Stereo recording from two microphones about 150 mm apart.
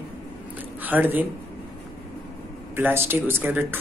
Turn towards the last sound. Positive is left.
turn(degrees=-15)  # may be behind; listen again after turning